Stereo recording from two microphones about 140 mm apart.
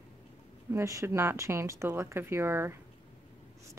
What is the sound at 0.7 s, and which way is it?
Speech, 20° right (ahead or behind).